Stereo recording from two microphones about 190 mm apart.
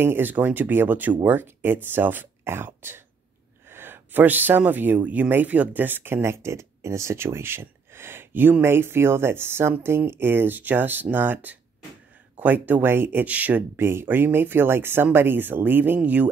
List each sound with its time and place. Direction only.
0.0 s speech: 10° right (ahead or behind)